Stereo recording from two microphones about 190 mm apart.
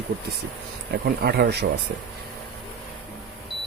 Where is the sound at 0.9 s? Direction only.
55° right (ahead or behind).